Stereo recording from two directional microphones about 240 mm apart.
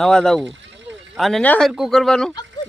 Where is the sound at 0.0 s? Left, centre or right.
Centre.